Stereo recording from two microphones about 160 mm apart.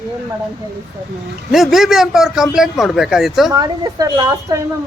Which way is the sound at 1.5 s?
Centre (ahead or behind).